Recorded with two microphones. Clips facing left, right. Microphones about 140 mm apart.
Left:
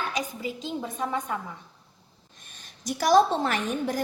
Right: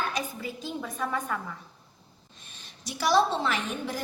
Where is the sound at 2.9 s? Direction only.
50° left (ahead or behind).